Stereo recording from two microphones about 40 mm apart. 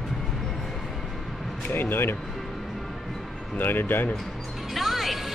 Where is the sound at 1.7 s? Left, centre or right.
Left.